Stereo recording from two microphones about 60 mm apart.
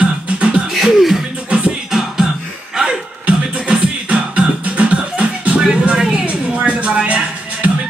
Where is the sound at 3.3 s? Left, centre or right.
Centre.